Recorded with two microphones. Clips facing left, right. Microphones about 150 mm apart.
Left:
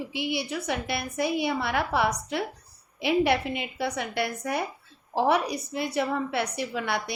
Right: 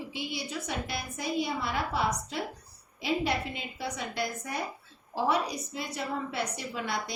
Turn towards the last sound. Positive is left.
turn(degrees=65)  # may be behind; listen again after turning